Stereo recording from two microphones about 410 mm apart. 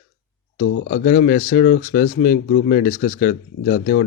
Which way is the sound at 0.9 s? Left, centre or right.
Left.